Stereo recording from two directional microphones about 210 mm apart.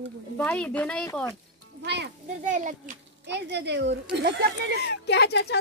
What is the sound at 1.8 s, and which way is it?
Speech, 55° right (ahead or behind).